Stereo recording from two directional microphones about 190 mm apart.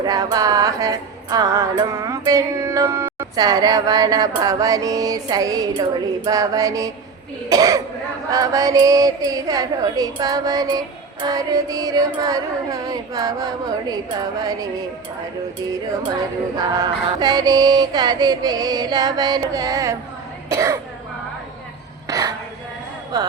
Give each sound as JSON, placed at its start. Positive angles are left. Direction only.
{"t": 0.0, "sound": "music", "side_deg": -20}
{"t": 7.5, "sound": "speech", "side_deg": -20}
{"t": 8.3, "sound": "music", "side_deg": -20}
{"t": 16.6, "sound": "music", "side_deg": -20}
{"t": 20.5, "sound": "speech", "side_deg": -15}
{"t": 22.0, "sound": "a sound", "side_deg": -20}